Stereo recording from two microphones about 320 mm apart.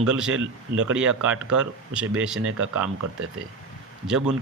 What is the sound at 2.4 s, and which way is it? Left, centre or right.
Speech, right.